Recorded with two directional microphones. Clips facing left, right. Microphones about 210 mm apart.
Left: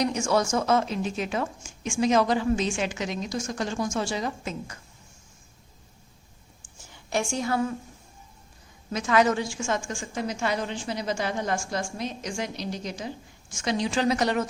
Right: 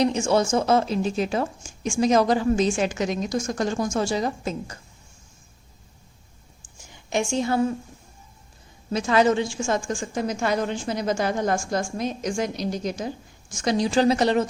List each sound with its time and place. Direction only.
0.0 s a woman's voice: 25° right (ahead or behind)
6.9 s a woman's voice: 20° right (ahead or behind)
8.9 s a woman's voice: 30° right (ahead or behind)